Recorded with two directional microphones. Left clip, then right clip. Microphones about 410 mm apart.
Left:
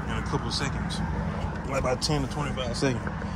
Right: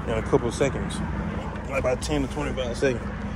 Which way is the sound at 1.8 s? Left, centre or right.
Centre.